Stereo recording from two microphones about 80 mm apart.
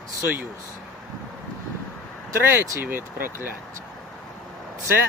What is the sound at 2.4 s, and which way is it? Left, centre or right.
Speech, right.